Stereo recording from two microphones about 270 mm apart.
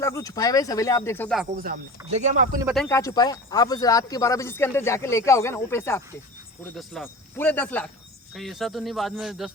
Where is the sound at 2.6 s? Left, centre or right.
Centre.